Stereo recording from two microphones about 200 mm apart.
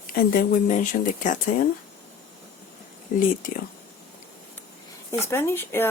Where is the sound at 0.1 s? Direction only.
45° left (ahead or behind).